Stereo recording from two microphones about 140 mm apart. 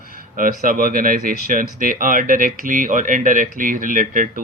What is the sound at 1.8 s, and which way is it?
Speech, 75° right (ahead or behind).